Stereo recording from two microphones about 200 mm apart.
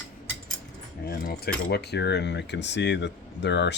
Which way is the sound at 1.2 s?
55° left (ahead or behind).